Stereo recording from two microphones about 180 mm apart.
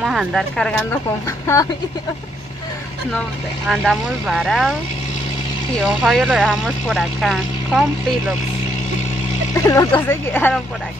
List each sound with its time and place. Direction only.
0.0 s speech: centre (ahead or behind); by 1.7 s 15° left (ahead or behind)
3.6 s speech: centre (ahead or behind)
5.8 s speech: centre (ahead or behind)
9.6 s speech: 20° left (ahead or behind)